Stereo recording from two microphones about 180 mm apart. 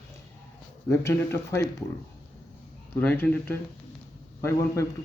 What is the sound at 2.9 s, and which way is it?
Speech, 10° left (ahead or behind).